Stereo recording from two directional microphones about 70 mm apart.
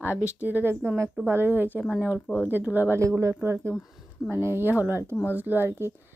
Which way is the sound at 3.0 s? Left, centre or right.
Right.